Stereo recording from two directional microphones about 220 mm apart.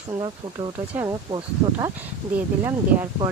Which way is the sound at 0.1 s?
20° right (ahead or behind).